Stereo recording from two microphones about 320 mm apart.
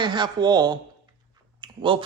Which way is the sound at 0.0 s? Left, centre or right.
Centre.